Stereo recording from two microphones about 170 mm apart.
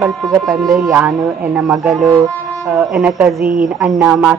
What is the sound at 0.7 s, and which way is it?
Speech, 20° right (ahead or behind).